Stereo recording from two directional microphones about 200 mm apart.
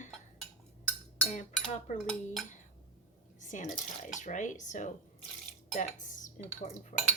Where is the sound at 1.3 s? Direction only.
35° left (ahead or behind).